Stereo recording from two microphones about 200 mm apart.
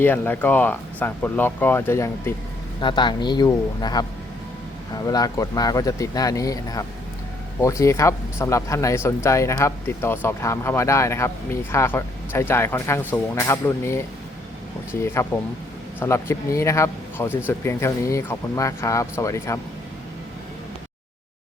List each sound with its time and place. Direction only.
0.0 s speech: 10° left (ahead or behind)
2.8 s speech: 20° left (ahead or behind)